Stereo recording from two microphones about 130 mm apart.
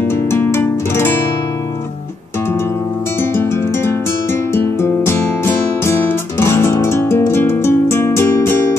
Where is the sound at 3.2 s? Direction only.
20° left (ahead or behind).